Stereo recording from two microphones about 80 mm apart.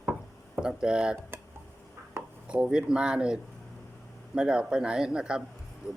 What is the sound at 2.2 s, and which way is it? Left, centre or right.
Chopping, right.